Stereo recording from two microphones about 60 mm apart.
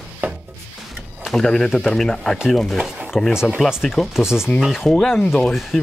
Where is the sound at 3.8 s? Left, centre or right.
Centre.